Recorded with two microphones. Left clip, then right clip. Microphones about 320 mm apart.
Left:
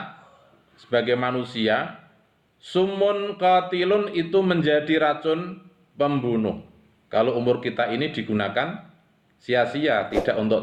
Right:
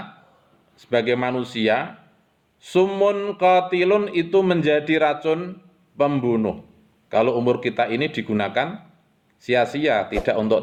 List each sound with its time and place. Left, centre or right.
0.8 s mantra: right
9.4 s speech: right
9.7 s mantra: right